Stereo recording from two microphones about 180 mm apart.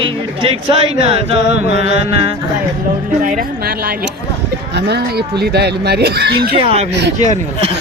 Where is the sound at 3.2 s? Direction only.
50° right (ahead or behind).